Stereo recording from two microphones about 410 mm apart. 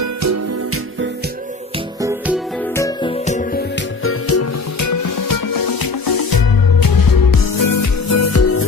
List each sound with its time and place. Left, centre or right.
0.0 s music: right
2.0 s music: centre; by 8.6 s left